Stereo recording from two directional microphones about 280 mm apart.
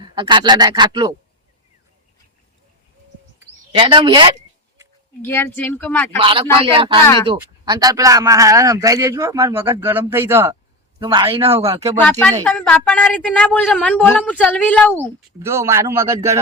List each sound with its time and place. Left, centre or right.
0.1 s a man's voice: centre
3.8 s a man's voice: centre
5.2 s speech: centre
6.1 s a man's voice: centre
12.4 s a woman's voice: centre
15.4 s a man's voice: centre